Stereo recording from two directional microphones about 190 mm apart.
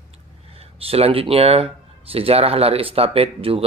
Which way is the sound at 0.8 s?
30° right (ahead or behind).